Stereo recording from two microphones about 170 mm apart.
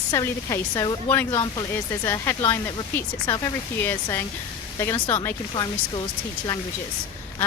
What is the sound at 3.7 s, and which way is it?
Speech, 15° left (ahead or behind).